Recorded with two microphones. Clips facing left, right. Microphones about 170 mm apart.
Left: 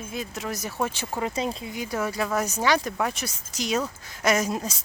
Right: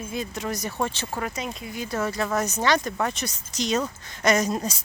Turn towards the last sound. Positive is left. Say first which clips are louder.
# right 2 dB
turn(degrees=0)  # may be behind; listen again after turning